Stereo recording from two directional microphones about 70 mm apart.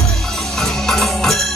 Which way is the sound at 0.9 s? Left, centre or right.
Centre.